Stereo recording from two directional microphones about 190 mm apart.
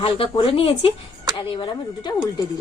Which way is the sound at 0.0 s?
25° left (ahead or behind).